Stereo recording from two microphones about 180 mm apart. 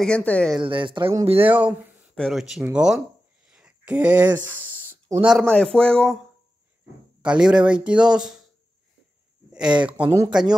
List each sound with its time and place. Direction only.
0.0 s speech: 5° left (ahead or behind)
0.6 s speech: 25° right (ahead or behind)
1.4 s speech: 10° right (ahead or behind)
3.5 s a sound: 5° right (ahead or behind)
5.2 s speech: centre (ahead or behind)
7.2 s speech: 5° right (ahead or behind)
9.8 s speech: 5° right (ahead or behind)